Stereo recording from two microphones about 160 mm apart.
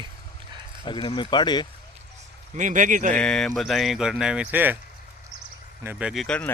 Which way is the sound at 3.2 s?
5° left (ahead or behind).